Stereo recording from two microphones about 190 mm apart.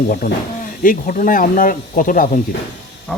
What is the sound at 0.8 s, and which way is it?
Speech, 45° left (ahead or behind).